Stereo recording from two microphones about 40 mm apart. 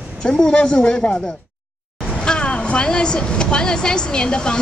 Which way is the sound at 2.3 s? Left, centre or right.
Left.